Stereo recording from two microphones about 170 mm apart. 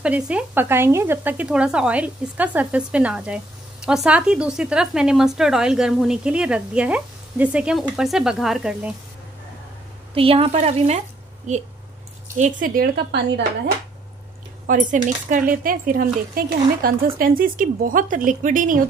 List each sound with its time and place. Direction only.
0.0 s speech: 5° right (ahead or behind)
10.1 s speech: 35° right (ahead or behind)
12.6 s a woman's voice: 60° right (ahead or behind)
14.7 s speech: 50° right (ahead or behind)